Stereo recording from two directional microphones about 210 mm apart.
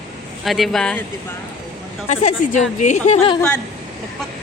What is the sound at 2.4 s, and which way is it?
Speech, 40° left (ahead or behind).